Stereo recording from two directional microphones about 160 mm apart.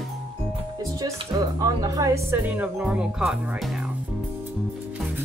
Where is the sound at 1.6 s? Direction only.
20° right (ahead or behind); by 3.3 s 5° right (ahead or behind).